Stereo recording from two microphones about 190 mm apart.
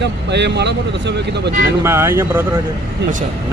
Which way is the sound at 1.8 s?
15° right (ahead or behind).